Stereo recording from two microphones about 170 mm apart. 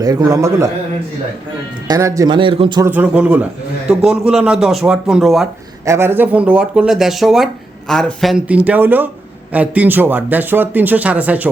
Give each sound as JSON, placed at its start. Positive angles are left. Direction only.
{"t": 0.0, "sound": "speech", "side_deg": -20}
{"t": 1.9, "sound": "speech", "side_deg": -20}
{"t": 2.8, "sound": "speech", "side_deg": -10}
{"t": 5.8, "sound": "speech", "side_deg": -15}